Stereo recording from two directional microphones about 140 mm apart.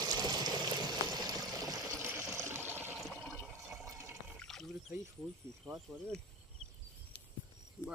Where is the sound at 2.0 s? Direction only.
15° right (ahead or behind).